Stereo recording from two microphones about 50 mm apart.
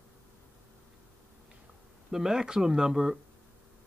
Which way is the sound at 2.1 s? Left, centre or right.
Centre.